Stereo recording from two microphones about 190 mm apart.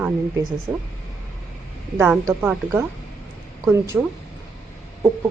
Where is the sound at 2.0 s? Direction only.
10° right (ahead or behind).